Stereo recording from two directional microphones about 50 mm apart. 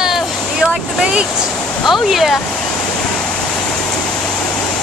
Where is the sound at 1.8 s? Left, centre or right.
Centre.